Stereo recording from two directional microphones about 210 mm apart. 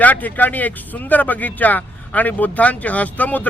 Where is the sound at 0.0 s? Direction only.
10° left (ahead or behind).